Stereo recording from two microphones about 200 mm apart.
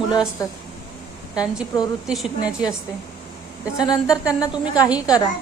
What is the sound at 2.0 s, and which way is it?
Speech, 5° right (ahead or behind).